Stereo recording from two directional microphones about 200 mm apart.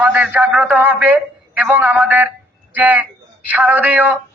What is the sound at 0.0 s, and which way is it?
A man's voice, 5° right (ahead or behind).